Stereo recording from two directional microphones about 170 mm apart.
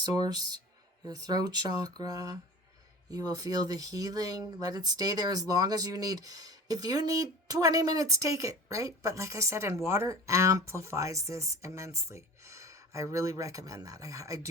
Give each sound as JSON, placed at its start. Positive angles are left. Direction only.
{"t": 0.0, "sound": "speech", "side_deg": -25}